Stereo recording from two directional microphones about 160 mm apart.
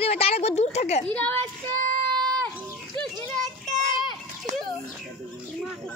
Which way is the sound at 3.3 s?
Centre (ahead or behind).